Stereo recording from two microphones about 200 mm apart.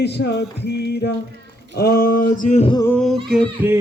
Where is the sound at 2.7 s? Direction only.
15° left (ahead or behind).